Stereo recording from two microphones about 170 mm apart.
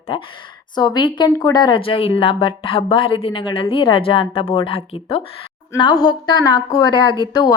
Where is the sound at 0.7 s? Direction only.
25° left (ahead or behind).